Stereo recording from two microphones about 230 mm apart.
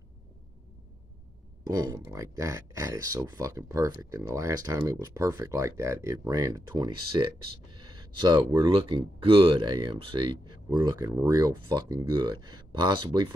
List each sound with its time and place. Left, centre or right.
1.7 s speech: centre